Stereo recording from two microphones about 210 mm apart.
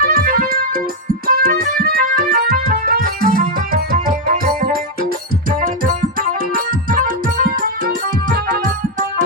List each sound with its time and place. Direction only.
0.0 s music: 45° right (ahead or behind)